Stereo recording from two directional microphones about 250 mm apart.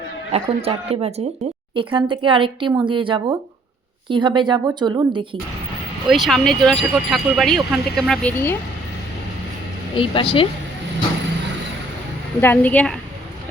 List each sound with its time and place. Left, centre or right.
0.3 s speech: right
6.1 s speech: centre
10.0 s speech: left
12.4 s a woman's voice: centre